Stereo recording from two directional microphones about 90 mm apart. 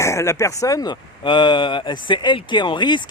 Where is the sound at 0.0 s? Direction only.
30° left (ahead or behind).